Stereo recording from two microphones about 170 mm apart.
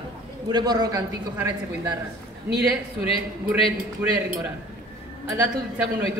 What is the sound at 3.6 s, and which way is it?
Speech, 35° left (ahead or behind).